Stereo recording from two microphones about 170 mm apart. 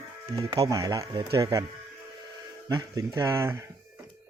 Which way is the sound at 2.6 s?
20° right (ahead or behind).